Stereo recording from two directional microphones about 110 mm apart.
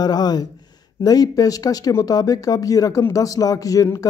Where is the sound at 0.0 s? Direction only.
40° left (ahead or behind).